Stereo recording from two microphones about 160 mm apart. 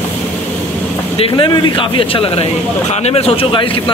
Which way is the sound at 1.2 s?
35° left (ahead or behind).